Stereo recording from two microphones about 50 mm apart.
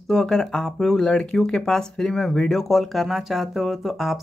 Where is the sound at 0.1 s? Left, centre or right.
Centre.